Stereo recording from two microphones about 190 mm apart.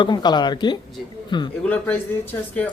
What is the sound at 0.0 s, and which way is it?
Speech, 20° left (ahead or behind).